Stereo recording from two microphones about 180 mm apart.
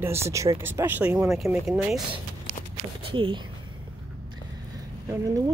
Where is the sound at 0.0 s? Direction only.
15° right (ahead or behind).